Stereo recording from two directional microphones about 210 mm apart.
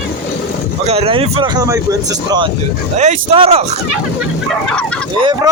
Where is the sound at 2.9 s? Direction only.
35° right (ahead or behind).